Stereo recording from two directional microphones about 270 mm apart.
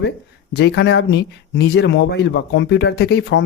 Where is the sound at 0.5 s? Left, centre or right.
Left.